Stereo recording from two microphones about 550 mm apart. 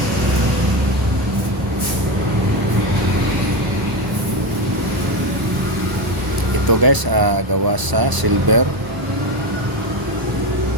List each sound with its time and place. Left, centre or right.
6.7 s speech: right